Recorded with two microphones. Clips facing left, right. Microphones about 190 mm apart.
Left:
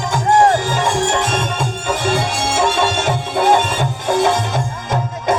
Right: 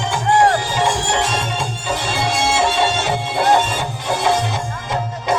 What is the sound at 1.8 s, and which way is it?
Music, 50° left (ahead or behind).